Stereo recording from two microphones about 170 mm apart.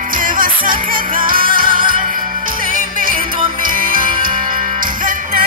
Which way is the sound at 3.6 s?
55° right (ahead or behind).